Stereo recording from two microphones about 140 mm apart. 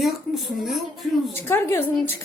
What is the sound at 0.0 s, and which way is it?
Speech, centre (ahead or behind).